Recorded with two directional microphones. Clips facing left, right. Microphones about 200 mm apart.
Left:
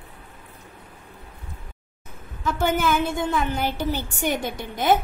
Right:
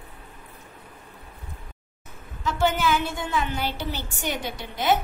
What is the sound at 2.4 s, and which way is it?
A woman's voice, 50° left (ahead or behind).